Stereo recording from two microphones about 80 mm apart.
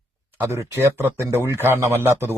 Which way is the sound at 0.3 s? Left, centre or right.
Right.